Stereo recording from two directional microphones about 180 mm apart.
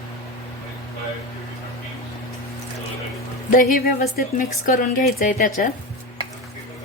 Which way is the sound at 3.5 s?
50° left (ahead or behind).